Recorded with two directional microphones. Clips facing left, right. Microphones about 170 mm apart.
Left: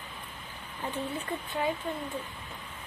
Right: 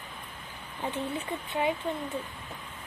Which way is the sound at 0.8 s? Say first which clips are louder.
Right 2 dB; 20° right (ahead or behind).